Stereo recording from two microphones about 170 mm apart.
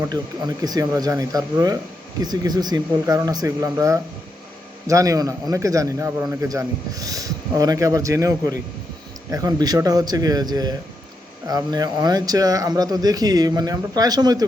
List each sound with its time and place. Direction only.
0.1 s speech: 25° right (ahead or behind)